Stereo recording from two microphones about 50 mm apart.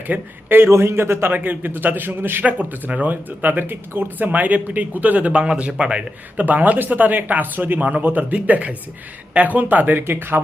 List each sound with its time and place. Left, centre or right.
0.1 s speech: right
0.4 s a man's voice: right
0.7 s a man's voice: right
1.3 s speech: right
2.4 s speech: right
6.4 s speech: right